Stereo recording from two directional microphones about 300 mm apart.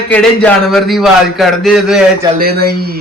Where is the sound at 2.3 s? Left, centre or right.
Right.